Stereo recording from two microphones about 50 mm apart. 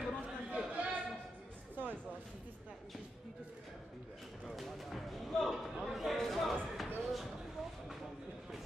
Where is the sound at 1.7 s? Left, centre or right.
Right.